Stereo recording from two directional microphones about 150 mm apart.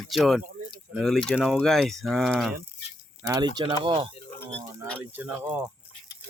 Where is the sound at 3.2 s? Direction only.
25° right (ahead or behind).